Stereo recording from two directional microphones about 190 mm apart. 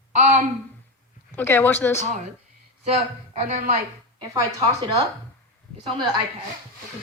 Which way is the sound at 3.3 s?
35° right (ahead or behind).